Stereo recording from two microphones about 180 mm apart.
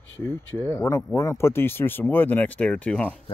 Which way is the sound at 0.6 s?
15° left (ahead or behind).